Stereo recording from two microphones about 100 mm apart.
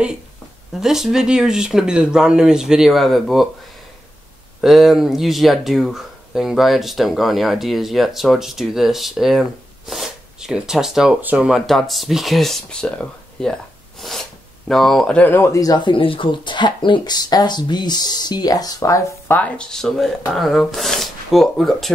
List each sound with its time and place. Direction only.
0.7 s speech: 5° right (ahead or behind)
4.6 s speech: centre (ahead or behind)
11.1 s speech: 15° right (ahead or behind); by 15.8 s 35° left (ahead or behind)
15.8 s speech: 60° left (ahead or behind); by 18.9 s 35° left (ahead or behind)
19.2 s speech: 15° left (ahead or behind)